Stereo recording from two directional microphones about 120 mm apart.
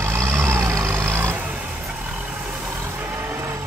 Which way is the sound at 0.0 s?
20° right (ahead or behind).